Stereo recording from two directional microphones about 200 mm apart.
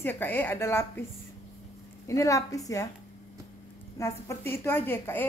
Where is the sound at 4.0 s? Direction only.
15° left (ahead or behind).